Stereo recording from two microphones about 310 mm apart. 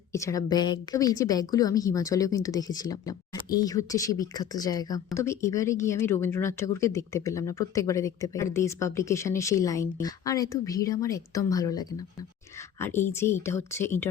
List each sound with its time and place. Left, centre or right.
0.1 s speech: centre
13.1 s speech: centre